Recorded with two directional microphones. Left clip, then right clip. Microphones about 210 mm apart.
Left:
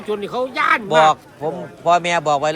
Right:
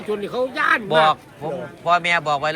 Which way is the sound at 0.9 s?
25° left (ahead or behind).